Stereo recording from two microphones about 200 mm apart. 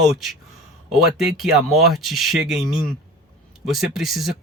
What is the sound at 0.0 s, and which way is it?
Speech, centre (ahead or behind).